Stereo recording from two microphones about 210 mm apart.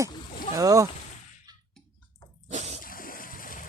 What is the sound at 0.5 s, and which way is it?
Speech, 15° right (ahead or behind).